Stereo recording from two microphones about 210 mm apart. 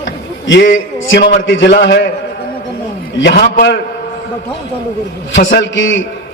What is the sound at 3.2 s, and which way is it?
Speech, 50° left (ahead or behind).